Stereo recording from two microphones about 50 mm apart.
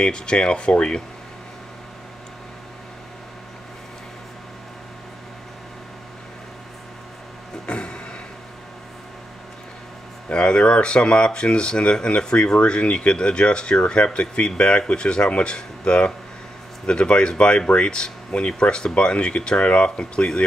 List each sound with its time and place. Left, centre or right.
0.0 s speech: centre
7.6 s a sound: centre
10.3 s speech: centre